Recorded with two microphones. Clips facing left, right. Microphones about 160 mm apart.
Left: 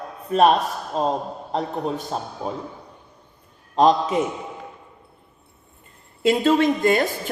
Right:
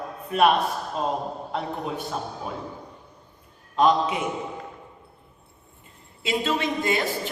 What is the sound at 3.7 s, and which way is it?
Speech, 40° left (ahead or behind).